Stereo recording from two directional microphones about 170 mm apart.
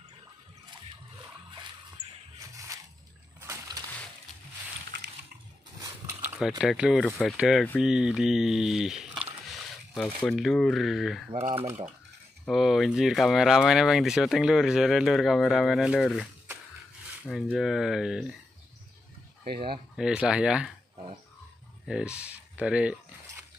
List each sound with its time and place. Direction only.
3.3 s a sound: 20° right (ahead or behind)
6.6 s speech: 5° right (ahead or behind)
11.5 s speech: 40° right (ahead or behind)
12.4 s speech: centre (ahead or behind)
17.3 s speech: centre (ahead or behind)
20.0 s speech: 5° right (ahead or behind)
21.8 s speech: 5° right (ahead or behind)